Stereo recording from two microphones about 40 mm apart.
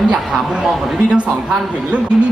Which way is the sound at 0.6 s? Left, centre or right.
Centre.